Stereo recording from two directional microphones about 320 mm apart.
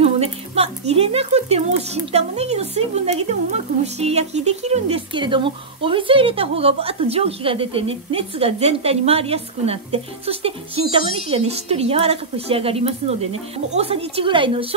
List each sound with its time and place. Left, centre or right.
0.0 s a woman's voice: centre